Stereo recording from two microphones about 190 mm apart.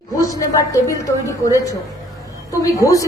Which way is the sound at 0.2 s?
20° left (ahead or behind).